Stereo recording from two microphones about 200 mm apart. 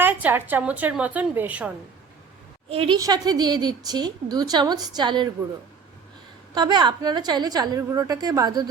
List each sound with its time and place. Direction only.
0.0 s a woman's voice: 10° right (ahead or behind)
2.6 s a woman's voice: 25° right (ahead or behind)
6.5 s a woman's voice: 20° right (ahead or behind)